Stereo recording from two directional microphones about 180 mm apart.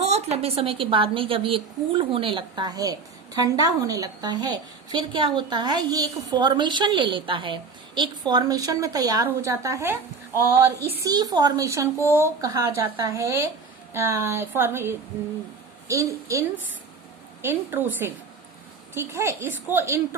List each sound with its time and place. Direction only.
0.0 s a woman's voice: 35° right (ahead or behind); by 11.9 s 20° right (ahead or behind)
11.9 s speech: 15° left (ahead or behind)
12.2 s speech: 15° right (ahead or behind)
18.9 s speech: 15° right (ahead or behind)